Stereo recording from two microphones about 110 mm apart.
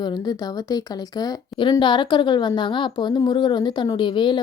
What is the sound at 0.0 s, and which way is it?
Speech, 35° left (ahead or behind).